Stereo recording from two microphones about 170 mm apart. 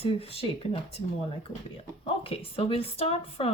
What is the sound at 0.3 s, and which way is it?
Speech, 35° left (ahead or behind).